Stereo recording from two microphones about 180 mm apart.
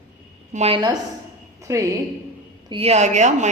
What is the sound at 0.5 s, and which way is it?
A woman's voice, 30° right (ahead or behind).